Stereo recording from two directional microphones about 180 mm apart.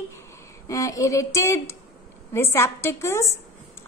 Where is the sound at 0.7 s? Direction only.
20° left (ahead or behind).